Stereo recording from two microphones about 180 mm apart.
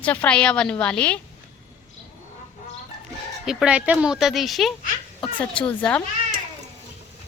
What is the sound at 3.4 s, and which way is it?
Speech, 5° right (ahead or behind).